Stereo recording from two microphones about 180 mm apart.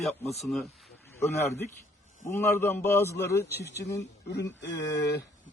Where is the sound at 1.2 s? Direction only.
15° left (ahead or behind).